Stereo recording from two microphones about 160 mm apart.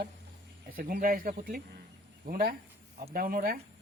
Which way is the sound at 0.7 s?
60° right (ahead or behind).